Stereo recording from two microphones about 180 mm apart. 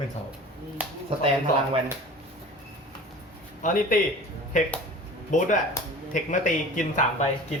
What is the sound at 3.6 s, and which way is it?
A man's voice, 45° left (ahead or behind).